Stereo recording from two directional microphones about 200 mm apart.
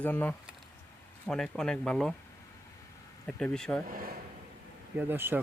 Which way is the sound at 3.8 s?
45° right (ahead or behind).